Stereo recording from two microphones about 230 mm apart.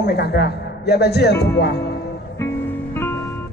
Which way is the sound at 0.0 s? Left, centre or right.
Left.